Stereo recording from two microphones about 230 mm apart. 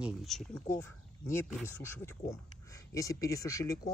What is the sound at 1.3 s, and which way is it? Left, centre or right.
Speech, centre.